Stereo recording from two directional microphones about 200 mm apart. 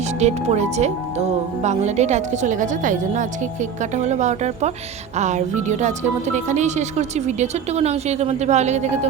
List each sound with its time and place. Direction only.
0.2 s speech: 35° right (ahead or behind)